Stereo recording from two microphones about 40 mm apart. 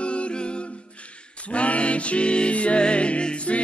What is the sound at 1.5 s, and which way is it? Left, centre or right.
Music, left.